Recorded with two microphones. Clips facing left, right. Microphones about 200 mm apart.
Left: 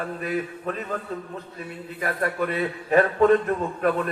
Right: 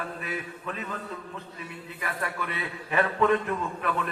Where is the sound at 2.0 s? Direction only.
45° left (ahead or behind).